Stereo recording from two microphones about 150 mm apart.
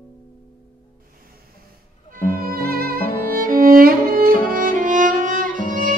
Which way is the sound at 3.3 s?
70° right (ahead or behind).